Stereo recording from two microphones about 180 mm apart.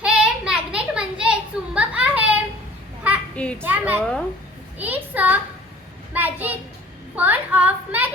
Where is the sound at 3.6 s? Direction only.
10° right (ahead or behind).